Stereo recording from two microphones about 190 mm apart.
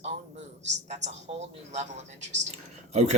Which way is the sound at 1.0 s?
35° right (ahead or behind).